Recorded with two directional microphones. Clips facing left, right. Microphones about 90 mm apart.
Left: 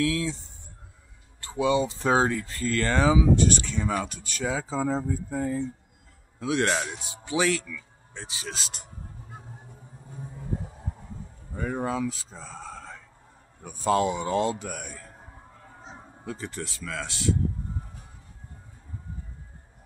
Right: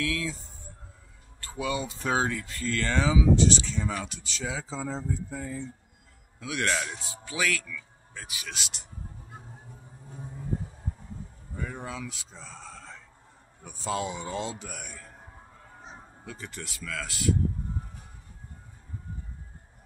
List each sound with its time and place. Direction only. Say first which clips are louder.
0.0 s speech: left 5 dB; 30° left (ahead or behind)
1.4 s speech: left 7 dB; 25° left (ahead or behind); by 5.7 s 45° left (ahead or behind)
6.4 s speech: left 4 dB; 35° left (ahead or behind)
6.9 s speech: left 7 dB; 20° left (ahead or behind); by 8.8 s 35° left (ahead or behind)
11.5 s speech: left 8 dB; 45° left (ahead or behind)
16.3 s speech: left 6 dB; 35° left (ahead or behind)